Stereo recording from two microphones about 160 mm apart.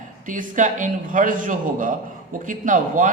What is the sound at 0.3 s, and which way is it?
A man's voice, 55° right (ahead or behind).